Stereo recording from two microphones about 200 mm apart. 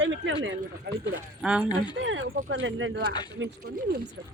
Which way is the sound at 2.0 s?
70° right (ahead or behind).